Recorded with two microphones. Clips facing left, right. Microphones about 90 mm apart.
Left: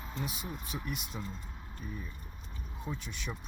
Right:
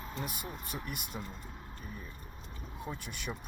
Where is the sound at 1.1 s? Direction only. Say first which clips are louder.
Left 1 dB; 15° right (ahead or behind).